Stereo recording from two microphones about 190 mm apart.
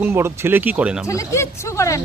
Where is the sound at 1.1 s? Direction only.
15° left (ahead or behind).